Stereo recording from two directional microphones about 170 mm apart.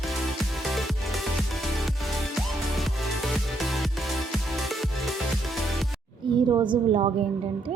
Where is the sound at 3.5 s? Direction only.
Centre (ahead or behind).